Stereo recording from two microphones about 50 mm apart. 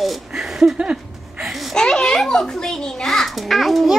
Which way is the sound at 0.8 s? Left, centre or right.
Centre.